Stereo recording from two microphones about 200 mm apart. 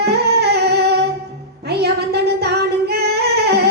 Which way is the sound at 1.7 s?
55° right (ahead or behind).